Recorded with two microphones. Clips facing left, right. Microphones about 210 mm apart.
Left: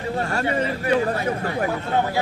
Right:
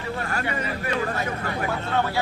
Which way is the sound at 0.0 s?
25° left (ahead or behind).